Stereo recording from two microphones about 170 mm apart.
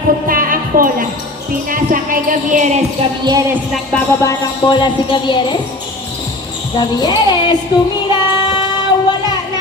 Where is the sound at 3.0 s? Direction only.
35° right (ahead or behind).